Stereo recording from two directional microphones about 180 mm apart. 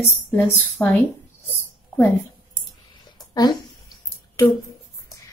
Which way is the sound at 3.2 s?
20° left (ahead or behind).